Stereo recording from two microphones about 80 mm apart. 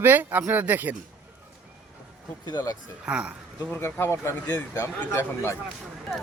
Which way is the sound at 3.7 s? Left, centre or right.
Left.